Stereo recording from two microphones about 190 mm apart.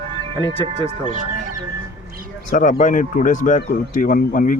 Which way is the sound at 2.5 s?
45° left (ahead or behind).